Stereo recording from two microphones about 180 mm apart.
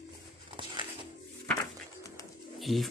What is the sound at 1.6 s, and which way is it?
Music, 20° left (ahead or behind).